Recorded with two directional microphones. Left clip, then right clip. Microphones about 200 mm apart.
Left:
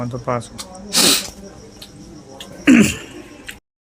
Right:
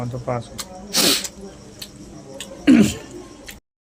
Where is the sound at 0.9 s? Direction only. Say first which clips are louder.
Left 3 dB; 10° left (ahead or behind).